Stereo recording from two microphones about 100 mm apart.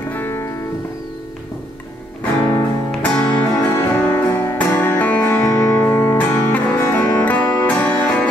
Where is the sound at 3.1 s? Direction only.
10° left (ahead or behind).